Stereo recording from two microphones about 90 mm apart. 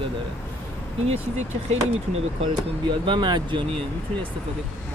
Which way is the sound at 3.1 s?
60° right (ahead or behind).